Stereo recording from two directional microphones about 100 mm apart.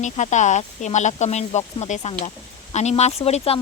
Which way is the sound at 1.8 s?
90° left.